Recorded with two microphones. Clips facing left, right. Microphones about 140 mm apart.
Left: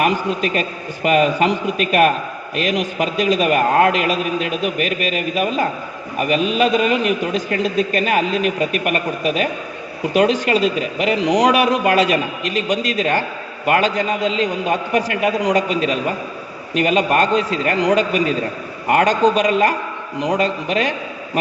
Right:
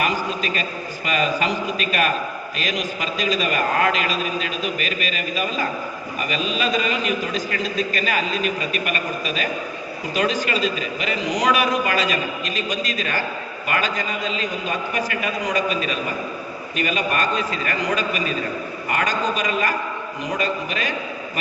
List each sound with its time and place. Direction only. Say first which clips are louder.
0.0 s a man's voice: left 5 dB; 65° left (ahead or behind)